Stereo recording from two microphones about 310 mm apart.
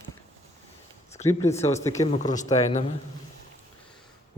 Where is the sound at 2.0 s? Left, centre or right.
Left.